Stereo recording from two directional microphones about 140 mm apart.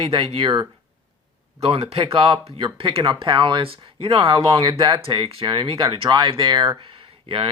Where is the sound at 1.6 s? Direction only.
45° right (ahead or behind).